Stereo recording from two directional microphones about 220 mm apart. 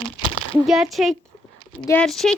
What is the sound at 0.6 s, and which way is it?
A woman's voice, centre (ahead or behind).